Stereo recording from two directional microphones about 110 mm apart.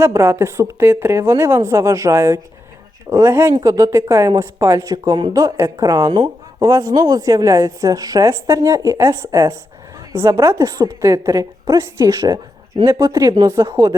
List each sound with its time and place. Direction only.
0.0 s a woman's voice: 25° right (ahead or behind)
6.1 s speech: 50° right (ahead or behind)
6.6 s a woman's voice: 30° right (ahead or behind)